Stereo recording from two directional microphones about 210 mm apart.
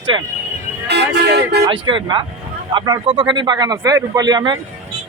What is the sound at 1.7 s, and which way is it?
Speech, 25° right (ahead or behind).